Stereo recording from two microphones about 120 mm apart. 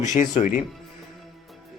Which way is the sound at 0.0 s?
90° left.